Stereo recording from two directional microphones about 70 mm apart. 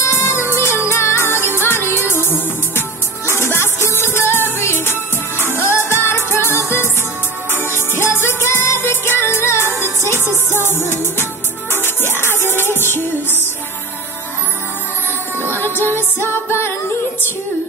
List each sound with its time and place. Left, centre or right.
0.0 s music: left
7.5 s music: right
8.0 s music: left
15.7 s music: right
16.2 s music: left